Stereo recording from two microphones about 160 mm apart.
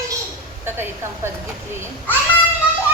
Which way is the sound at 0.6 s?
15° right (ahead or behind).